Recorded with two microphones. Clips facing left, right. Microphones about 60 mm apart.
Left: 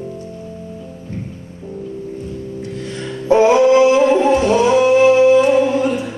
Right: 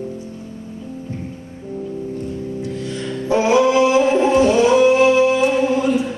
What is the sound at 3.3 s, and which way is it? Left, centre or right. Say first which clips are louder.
Music: left 4 dB; left.